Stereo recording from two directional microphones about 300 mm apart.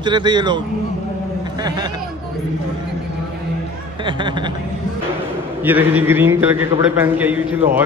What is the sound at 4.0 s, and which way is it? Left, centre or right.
Speech, centre.